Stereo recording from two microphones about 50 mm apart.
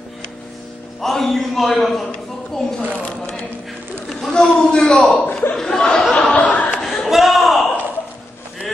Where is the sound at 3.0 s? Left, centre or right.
Left.